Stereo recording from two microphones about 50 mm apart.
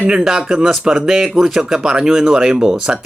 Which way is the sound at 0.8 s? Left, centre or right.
Centre.